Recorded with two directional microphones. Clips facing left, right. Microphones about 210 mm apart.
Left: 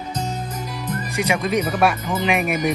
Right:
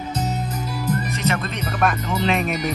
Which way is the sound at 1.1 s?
10° left (ahead or behind).